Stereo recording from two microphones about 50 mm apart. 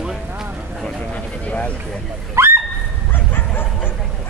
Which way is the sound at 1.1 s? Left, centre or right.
Left.